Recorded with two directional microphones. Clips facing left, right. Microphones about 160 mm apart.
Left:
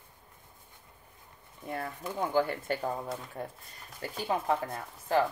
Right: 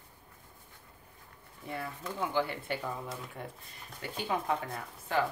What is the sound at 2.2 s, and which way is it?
Speech, 45° left (ahead or behind).